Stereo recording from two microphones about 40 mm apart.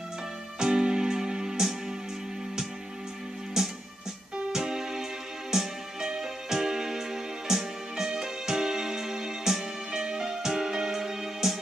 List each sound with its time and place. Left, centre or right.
0.6 s music: centre
3.6 s music: centre